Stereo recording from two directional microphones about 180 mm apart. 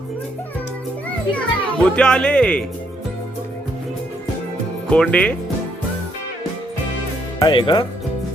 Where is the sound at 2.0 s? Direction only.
5° left (ahead or behind).